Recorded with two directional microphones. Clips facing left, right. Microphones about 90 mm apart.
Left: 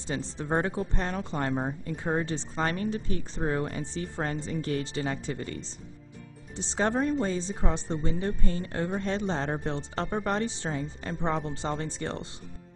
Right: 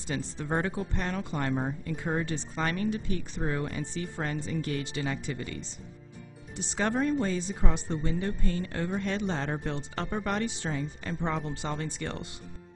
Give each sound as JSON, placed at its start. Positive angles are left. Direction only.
{"t": 0.0, "sound": "speech", "side_deg": 25}
{"t": 6.5, "sound": "speech", "side_deg": 25}